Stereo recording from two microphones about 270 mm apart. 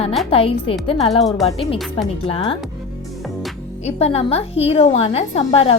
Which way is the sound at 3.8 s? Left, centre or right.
Left.